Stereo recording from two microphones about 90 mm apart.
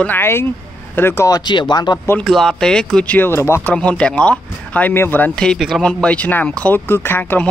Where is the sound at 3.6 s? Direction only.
15° left (ahead or behind).